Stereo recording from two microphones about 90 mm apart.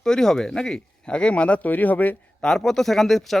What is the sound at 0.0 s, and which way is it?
Speech, 5° left (ahead or behind).